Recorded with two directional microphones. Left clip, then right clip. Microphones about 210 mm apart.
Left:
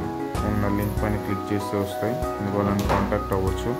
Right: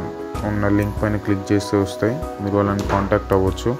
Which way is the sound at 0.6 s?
25° right (ahead or behind).